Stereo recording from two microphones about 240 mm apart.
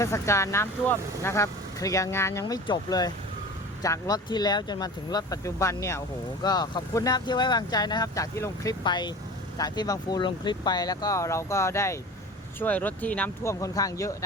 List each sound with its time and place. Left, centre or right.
0.0 s speech: centre